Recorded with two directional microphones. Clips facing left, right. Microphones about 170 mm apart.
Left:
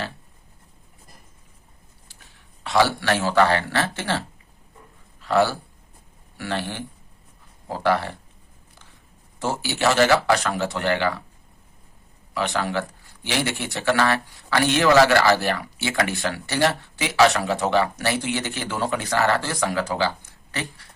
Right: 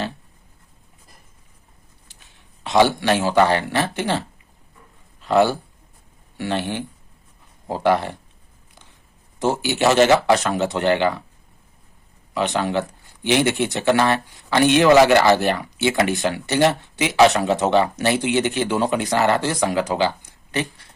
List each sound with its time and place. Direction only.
2.6 s a man's voice: 20° right (ahead or behind)
5.2 s speech: 20° right (ahead or behind)
9.4 s speech: 20° right (ahead or behind)
12.3 s speech: 20° right (ahead or behind)